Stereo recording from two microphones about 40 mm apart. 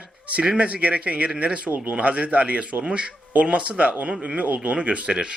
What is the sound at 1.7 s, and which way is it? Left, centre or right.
Speech, right.